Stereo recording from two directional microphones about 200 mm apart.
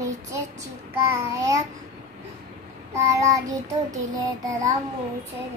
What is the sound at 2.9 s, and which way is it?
Speech, 15° right (ahead or behind).